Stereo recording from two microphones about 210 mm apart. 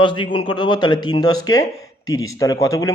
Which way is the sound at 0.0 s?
20° left (ahead or behind).